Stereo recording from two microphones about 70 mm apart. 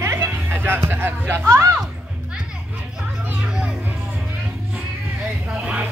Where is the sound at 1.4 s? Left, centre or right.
Right.